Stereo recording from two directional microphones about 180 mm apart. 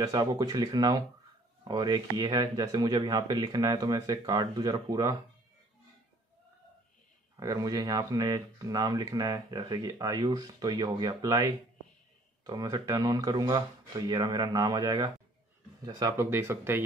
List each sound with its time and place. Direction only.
0.0 s speech: 20° right (ahead or behind)
7.3 s speech: 20° right (ahead or behind)